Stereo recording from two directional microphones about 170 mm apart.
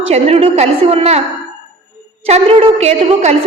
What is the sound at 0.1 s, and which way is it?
A woman's voice, 35° right (ahead or behind).